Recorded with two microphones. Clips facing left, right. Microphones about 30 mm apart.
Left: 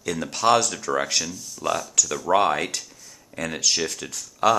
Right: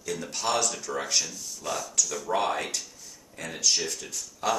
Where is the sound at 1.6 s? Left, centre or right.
Left.